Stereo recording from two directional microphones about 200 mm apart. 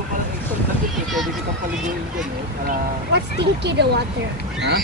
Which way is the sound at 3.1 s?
55° right (ahead or behind).